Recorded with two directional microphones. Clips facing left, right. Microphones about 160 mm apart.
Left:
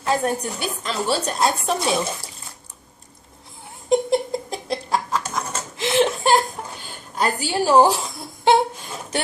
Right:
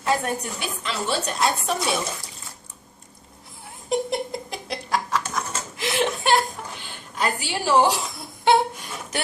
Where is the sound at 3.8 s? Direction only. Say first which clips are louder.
Left 6 dB; 30° left (ahead or behind).